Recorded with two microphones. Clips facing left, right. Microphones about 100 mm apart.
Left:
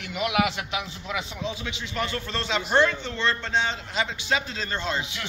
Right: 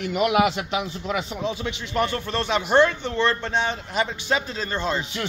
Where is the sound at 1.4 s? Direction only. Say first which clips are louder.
Right 4 dB; 50° right (ahead or behind).